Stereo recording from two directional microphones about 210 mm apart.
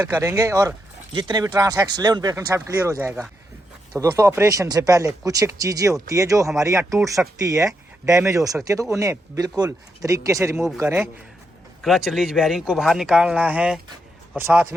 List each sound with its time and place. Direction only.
0.0 s speech: 15° right (ahead or behind)
11.8 s speech: centre (ahead or behind)